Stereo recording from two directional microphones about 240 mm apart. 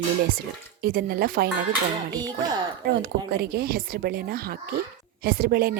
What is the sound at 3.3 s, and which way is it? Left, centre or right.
Speech, right.